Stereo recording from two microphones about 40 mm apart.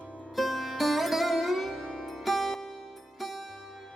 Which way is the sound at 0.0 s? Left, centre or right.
Left.